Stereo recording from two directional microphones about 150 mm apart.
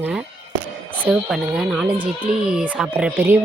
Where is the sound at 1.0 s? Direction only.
5° right (ahead or behind).